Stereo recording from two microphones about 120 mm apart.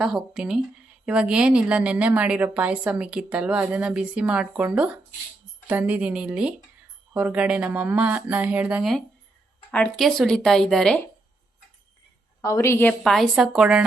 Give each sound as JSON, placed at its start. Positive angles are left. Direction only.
{"t": 0.0, "sound": "a woman's voice", "side_deg": -5}
{"t": 8.8, "sound": "speech", "side_deg": 0}
{"t": 12.4, "sound": "a woman's voice", "side_deg": 25}
{"t": 12.9, "sound": "speech", "side_deg": 0}